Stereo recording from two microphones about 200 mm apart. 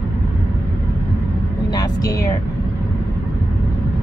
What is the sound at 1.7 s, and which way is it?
Speech, 20° left (ahead or behind).